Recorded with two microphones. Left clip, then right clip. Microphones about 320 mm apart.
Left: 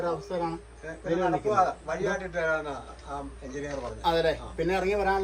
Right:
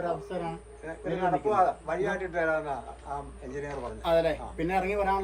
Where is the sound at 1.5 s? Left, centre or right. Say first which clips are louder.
Right 1 dB; centre.